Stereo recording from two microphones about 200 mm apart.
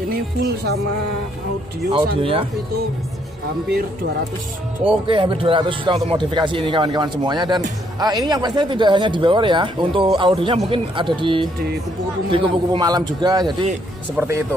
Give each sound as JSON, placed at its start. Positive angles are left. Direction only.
{"t": 1.9, "sound": "speech", "side_deg": -30}
{"t": 4.8, "sound": "speech", "side_deg": -25}